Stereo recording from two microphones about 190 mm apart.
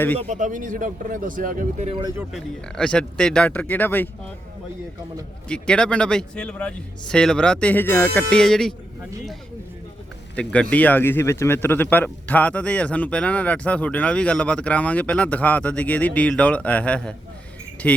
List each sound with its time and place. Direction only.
0.2 s speech: 40° right (ahead or behind)
2.3 s speech: 5° left (ahead or behind)
5.5 s speech: 5° left (ahead or behind)
10.3 s a man's voice: 5° left (ahead or behind)